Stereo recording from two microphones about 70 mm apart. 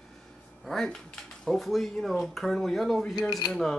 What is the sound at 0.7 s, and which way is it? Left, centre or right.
Speech, centre.